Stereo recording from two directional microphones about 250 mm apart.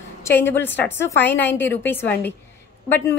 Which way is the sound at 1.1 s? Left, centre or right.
Left.